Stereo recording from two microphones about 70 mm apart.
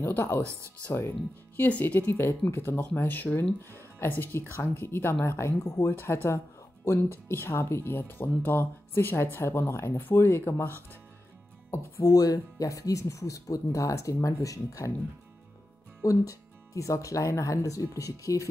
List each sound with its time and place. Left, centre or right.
0.0 s speech: left
0.4 s speech: right
0.8 s speech: left
11.7 s speech: left
16.0 s speech: left